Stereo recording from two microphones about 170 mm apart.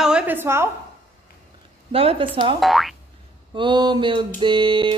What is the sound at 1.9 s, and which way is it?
Speech, 35° right (ahead or behind).